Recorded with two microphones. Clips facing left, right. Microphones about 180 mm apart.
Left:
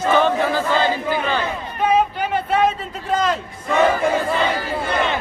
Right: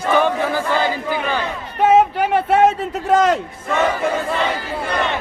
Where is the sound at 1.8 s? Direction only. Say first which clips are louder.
Right 5 dB; 80° right.